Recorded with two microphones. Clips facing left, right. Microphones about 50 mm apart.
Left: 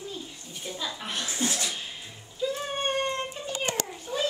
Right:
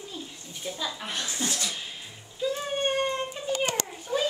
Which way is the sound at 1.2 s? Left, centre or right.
Left.